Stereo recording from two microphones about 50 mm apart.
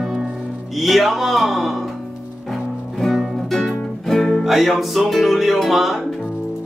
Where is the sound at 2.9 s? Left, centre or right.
Centre.